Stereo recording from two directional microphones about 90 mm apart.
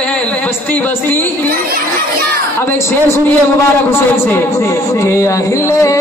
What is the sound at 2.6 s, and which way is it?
Speech, 25° left (ahead or behind).